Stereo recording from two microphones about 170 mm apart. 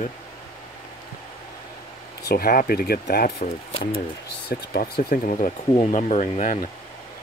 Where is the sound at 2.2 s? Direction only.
65° left (ahead or behind).